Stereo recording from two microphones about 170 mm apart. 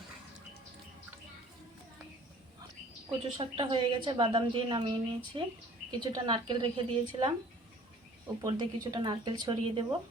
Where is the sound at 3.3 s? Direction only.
30° right (ahead or behind).